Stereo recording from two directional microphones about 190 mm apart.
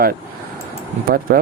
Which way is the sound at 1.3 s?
55° right (ahead or behind).